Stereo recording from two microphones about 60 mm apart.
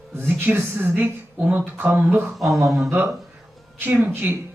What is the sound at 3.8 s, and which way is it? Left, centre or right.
Speech, right.